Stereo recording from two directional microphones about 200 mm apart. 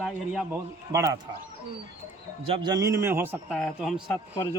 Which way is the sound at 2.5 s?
20° right (ahead or behind).